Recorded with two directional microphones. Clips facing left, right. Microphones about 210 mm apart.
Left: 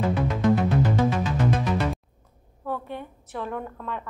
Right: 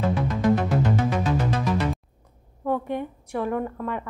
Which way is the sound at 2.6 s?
15° right (ahead or behind).